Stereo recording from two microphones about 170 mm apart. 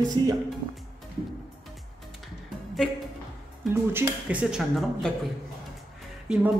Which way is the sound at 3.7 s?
10° right (ahead or behind).